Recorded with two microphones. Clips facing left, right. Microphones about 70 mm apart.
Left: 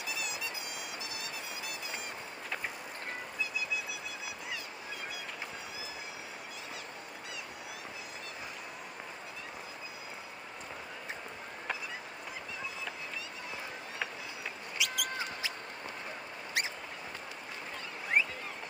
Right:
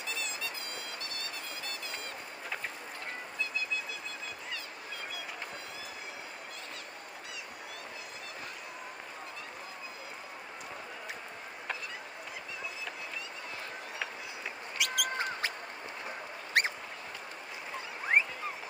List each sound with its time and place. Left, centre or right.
14.8 s basketball bounce: right
16.6 s duck: right
18.1 s a sound: right